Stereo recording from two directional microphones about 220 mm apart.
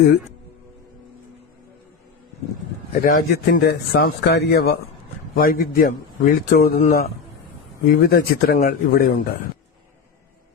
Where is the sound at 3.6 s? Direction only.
45° left (ahead or behind).